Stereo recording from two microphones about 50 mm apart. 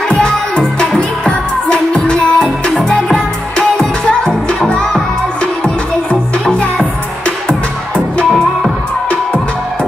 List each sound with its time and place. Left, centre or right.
0.1 s music: left
3.1 s music: centre